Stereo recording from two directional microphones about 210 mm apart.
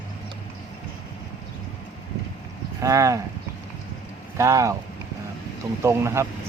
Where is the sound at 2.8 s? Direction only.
15° right (ahead or behind).